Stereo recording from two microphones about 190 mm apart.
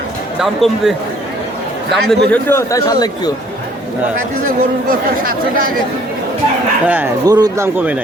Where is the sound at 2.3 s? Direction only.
15° left (ahead or behind).